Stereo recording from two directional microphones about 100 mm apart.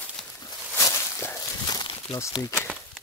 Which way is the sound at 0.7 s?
25° left (ahead or behind).